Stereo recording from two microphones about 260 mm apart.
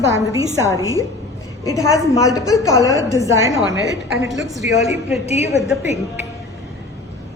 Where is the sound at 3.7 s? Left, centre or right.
Right.